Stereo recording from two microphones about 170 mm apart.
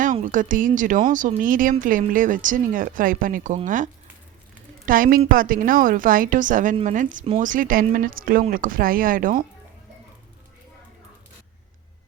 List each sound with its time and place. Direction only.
0.0 s speech: 50° right (ahead or behind)
4.9 s speech: 55° right (ahead or behind)